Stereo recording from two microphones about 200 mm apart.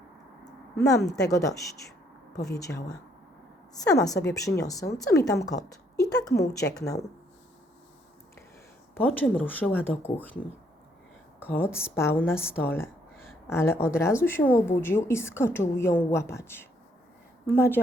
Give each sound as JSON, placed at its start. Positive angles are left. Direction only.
{"t": 1.0, "sound": "speech", "side_deg": 15}
{"t": 9.0, "sound": "speech", "side_deg": 10}
{"t": 11.4, "sound": "speech", "side_deg": 10}